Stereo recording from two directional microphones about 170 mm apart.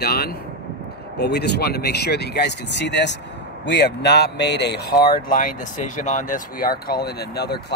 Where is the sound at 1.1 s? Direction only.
75° left (ahead or behind).